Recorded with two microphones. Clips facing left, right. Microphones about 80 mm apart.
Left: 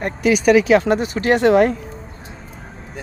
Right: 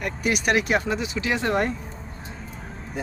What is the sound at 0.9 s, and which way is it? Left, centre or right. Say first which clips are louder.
Speech: left 9 dB; left.